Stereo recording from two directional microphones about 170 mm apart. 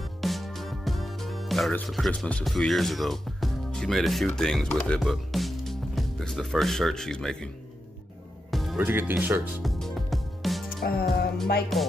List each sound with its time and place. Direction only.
0.2 s music: centre (ahead or behind)
4.4 s speech: 5° left (ahead or behind)
8.5 s music: centre (ahead or behind)
8.8 s speech: 10° right (ahead or behind)
9.6 s music: centre (ahead or behind)
10.8 s music: 60° left (ahead or behind)
11.7 s music: centre (ahead or behind)